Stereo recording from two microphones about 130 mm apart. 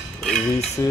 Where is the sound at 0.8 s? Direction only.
25° left (ahead or behind).